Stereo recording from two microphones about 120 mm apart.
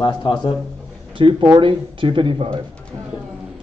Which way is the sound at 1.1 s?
40° right (ahead or behind).